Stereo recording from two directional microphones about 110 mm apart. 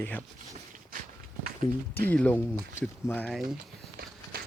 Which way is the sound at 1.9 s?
15° left (ahead or behind).